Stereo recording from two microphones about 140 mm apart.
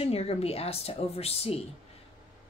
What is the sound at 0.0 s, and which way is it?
Speech, 45° left (ahead or behind).